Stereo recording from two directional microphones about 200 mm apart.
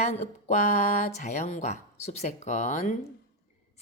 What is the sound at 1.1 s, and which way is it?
A woman's voice, 35° left (ahead or behind).